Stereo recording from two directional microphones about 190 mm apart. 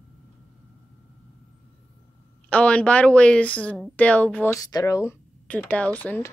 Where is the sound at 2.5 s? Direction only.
5° left (ahead or behind).